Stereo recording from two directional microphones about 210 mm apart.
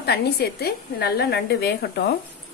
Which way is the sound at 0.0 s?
50° left (ahead or behind).